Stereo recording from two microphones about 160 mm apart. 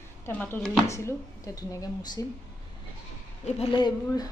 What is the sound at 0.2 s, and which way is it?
Speech, 10° left (ahead or behind).